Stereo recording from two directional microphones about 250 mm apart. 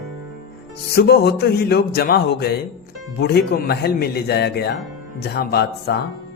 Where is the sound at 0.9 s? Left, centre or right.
Left.